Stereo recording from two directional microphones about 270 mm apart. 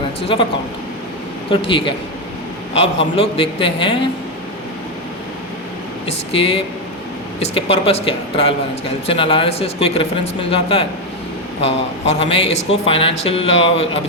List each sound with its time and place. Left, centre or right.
0.2 s a man's voice: left
1.5 s a man's voice: centre
6.1 s a man's voice: left